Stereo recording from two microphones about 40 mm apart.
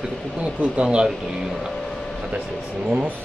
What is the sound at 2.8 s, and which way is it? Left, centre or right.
Speech, right.